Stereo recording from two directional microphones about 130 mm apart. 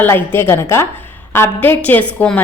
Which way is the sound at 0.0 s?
15° left (ahead or behind).